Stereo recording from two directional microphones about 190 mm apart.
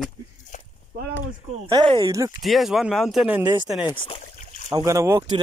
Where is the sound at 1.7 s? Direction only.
25° right (ahead or behind).